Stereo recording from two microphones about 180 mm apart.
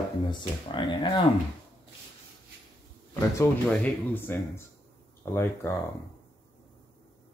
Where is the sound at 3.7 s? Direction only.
10° left (ahead or behind).